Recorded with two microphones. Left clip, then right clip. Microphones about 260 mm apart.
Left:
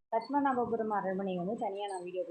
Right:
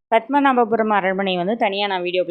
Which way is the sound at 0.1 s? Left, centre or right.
Right.